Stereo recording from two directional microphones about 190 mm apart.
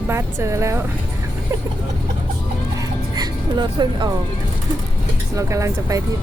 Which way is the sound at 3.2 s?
20° right (ahead or behind).